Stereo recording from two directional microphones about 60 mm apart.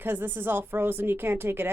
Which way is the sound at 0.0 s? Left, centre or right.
Right.